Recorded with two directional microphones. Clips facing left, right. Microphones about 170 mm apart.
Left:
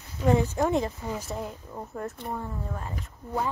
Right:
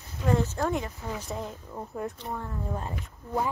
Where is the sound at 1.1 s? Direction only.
5° left (ahead or behind).